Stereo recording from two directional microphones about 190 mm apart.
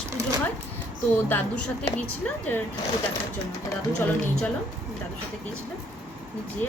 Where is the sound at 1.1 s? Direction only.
10° left (ahead or behind).